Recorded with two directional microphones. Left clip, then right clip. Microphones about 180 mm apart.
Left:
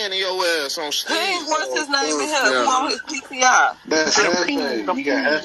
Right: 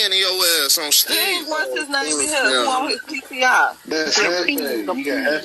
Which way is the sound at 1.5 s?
40° left (ahead or behind).